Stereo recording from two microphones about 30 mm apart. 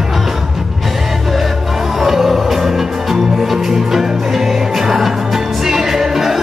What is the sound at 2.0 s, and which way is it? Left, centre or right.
Music, centre.